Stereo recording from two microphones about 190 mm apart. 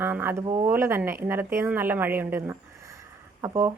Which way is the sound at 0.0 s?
10° right (ahead or behind).